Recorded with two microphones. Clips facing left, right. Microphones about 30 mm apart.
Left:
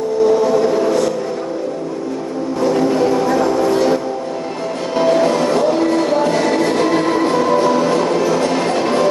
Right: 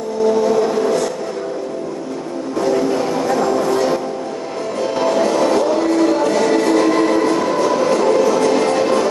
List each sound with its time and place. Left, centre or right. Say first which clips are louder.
0.3 s a sound: right 1 dB; centre
2.6 s music: left 2 dB; centre
4.9 s music: left 3 dB; centre
5.6 s train: even; centre